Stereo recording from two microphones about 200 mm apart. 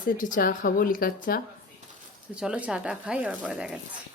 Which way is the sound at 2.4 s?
5° right (ahead or behind).